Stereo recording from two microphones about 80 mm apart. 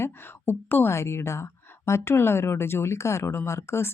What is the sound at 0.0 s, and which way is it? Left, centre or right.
Speech, left.